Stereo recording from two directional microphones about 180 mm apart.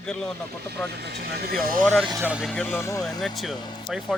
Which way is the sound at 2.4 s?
5° left (ahead or behind).